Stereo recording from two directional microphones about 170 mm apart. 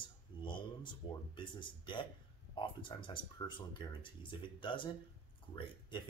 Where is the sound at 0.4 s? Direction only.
30° left (ahead or behind).